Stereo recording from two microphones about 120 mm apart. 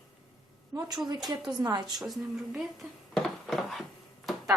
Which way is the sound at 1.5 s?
35° right (ahead or behind).